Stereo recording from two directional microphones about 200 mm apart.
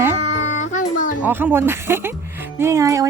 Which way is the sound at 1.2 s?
10° right (ahead or behind).